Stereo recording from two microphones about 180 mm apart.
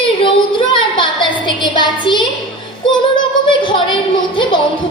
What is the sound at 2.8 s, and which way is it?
Music, 25° left (ahead or behind).